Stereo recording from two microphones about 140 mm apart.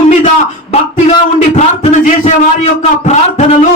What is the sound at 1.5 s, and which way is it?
A man's voice, 55° left (ahead or behind).